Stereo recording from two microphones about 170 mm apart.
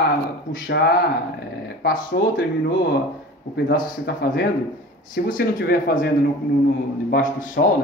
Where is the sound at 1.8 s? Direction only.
65° left (ahead or behind).